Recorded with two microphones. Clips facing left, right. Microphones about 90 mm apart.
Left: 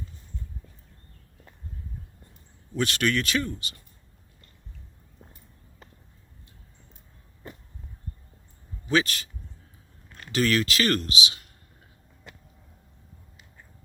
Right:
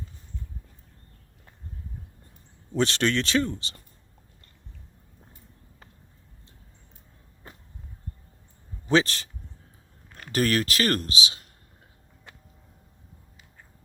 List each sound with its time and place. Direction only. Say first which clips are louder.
2.7 s speech: right 2 dB; 25° right (ahead or behind)
8.9 s speech: right 2 dB; 30° right (ahead or behind)
10.3 s speech: even; 40° right (ahead or behind)